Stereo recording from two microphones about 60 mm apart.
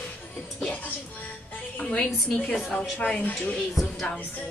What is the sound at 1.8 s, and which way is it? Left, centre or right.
Speech, centre.